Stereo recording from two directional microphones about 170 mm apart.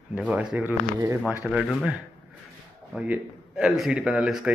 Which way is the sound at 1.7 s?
5° right (ahead or behind).